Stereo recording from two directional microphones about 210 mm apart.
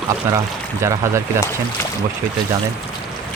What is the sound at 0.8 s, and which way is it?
Speech, 15° right (ahead or behind).